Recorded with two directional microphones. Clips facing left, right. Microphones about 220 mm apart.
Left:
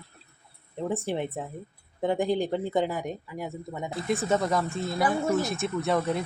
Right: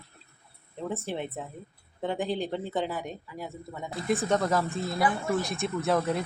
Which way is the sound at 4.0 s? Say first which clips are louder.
Even; centre (ahead or behind).